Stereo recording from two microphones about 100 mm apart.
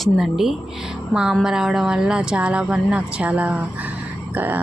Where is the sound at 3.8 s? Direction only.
15° right (ahead or behind).